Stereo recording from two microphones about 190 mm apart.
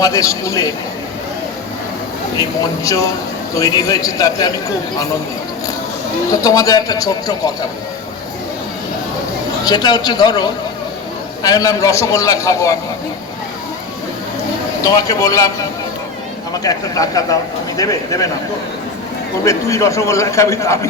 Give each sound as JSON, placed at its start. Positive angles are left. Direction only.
{"t": 0.0, "sound": "a man's voice", "side_deg": 20}
{"t": 2.4, "sound": "a man's voice", "side_deg": 15}
{"t": 6.4, "sound": "a man's voice", "side_deg": 20}
{"t": 9.6, "sound": "a man's voice", "side_deg": 20}
{"t": 14.8, "sound": "a man's voice", "side_deg": 20}
{"t": 16.6, "sound": "a man's voice", "side_deg": 20}
{"t": 19.5, "sound": "a man's voice", "side_deg": 15}